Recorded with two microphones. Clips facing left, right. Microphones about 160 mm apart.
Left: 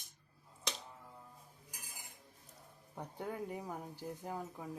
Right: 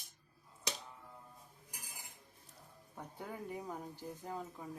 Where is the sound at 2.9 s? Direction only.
10° left (ahead or behind).